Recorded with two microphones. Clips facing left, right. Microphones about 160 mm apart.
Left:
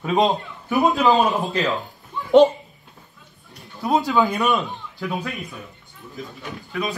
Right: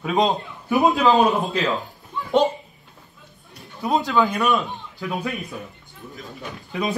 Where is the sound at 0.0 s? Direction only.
Centre (ahead or behind).